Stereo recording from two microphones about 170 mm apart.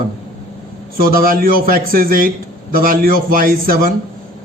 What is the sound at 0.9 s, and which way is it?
A man's voice, 60° right (ahead or behind).